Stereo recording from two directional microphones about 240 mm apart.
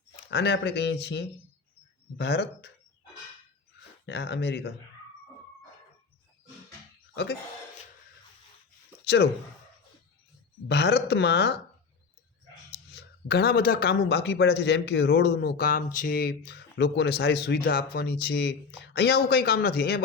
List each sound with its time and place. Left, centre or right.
0.3 s speech: left
4.0 s speech: left
7.1 s a sound: left
9.0 s speech: left
10.7 s speech: left
12.9 s speech: left